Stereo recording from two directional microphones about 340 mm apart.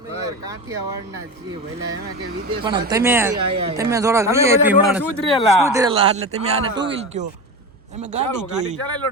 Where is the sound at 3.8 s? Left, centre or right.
Centre.